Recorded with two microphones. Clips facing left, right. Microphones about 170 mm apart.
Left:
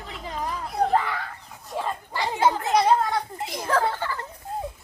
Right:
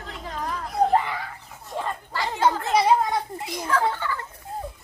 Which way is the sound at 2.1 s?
15° left (ahead or behind).